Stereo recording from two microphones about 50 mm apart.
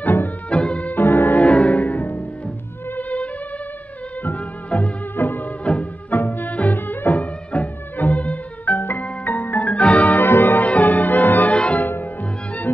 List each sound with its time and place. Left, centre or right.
0.0 s music: left
0.5 s music: left
1.4 s music: left
5.1 s music of bollywood: left
5.6 s music: left
6.1 s music: left
10.2 s music: left
11.5 s music: left
11.9 s music: left